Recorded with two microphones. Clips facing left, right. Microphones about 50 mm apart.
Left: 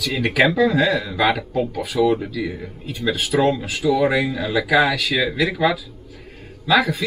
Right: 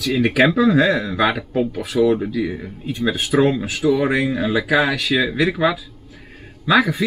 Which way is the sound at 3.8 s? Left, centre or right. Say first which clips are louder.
Even; centre.